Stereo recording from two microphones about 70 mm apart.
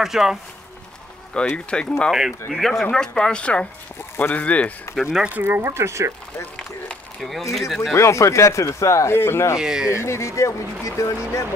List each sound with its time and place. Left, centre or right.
0.0 s speech: centre
1.3 s speech: centre
2.0 s speech: centre
5.3 s speech: right
5.7 s speech: right
7.2 s speech: centre
7.9 s speech: left
9.6 s speech: centre
9.8 s speech: left